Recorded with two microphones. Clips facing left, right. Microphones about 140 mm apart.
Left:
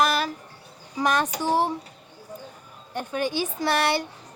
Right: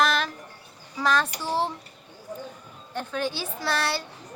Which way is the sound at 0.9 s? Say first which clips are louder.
Left 1 dB; 15° left (ahead or behind).